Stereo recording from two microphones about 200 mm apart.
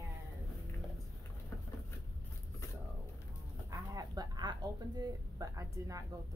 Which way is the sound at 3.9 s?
20° right (ahead or behind).